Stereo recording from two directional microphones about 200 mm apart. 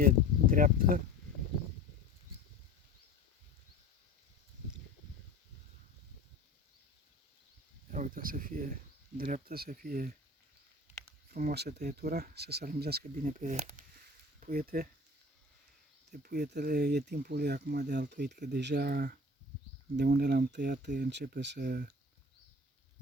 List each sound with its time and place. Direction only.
0.0 s speech: 45° right (ahead or behind)
7.9 s speech: 40° right (ahead or behind)
11.3 s speech: 45° right (ahead or behind)
16.2 s speech: 55° right (ahead or behind)